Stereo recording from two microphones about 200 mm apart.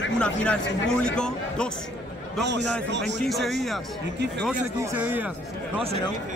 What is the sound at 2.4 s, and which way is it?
Speech, 60° right (ahead or behind).